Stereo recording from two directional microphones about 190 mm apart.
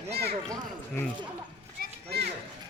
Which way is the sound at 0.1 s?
60° right (ahead or behind).